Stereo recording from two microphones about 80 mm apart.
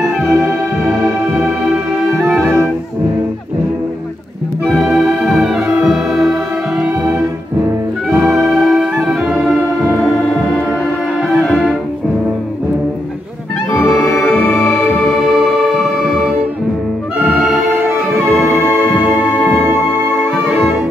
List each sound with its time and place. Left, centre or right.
0.3 s music: right
4.9 s music: centre
6.8 s music: centre
9.3 s organ: centre
13.8 s music: centre
15.3 s music: centre
18.5 s music: right